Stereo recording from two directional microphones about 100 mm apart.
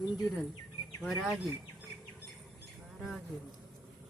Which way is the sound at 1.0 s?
5° right (ahead or behind).